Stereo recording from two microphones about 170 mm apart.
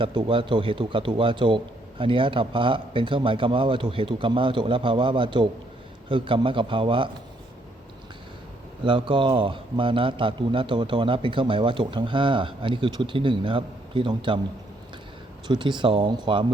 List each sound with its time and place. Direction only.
0.0 s a man's voice: 30° right (ahead or behind)
8.8 s a man's voice: 30° right (ahead or behind)
15.4 s a man's voice: 30° right (ahead or behind)